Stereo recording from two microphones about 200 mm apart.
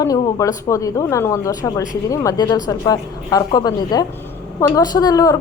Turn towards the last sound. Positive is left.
turn(degrees=15)  # may be behind; listen again after turning